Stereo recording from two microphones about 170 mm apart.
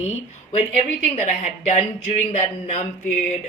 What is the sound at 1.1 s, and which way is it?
Speech, 45° left (ahead or behind).